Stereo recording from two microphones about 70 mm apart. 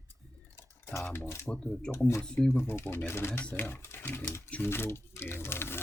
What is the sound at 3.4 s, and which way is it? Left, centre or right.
Speech, left.